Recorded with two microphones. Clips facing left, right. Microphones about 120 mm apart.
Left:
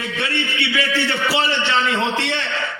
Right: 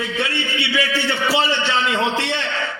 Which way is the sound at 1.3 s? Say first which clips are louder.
Right 2 dB; 15° right (ahead or behind).